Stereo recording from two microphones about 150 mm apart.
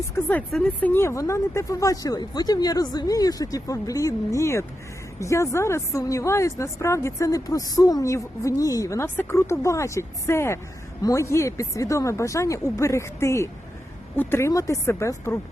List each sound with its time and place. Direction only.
0.2 s a woman's voice: 10° left (ahead or behind)